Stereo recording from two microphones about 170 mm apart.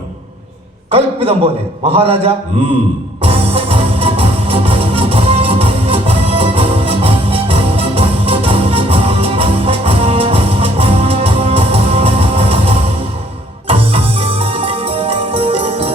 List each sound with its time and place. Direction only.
0.9 s a man's voice: 35° right (ahead or behind)
3.2 s music: 35° right (ahead or behind)